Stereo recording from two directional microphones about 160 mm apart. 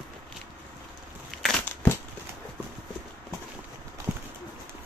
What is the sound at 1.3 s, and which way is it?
Crushing, centre (ahead or behind).